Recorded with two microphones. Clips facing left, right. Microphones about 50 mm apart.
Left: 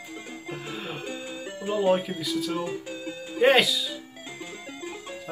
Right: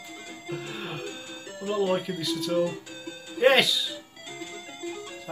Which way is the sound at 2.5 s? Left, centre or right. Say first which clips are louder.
Right 4 dB; left.